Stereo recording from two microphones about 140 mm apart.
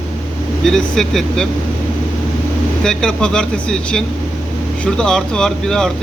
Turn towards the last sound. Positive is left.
turn(degrees=5)  # may be behind; listen again after turning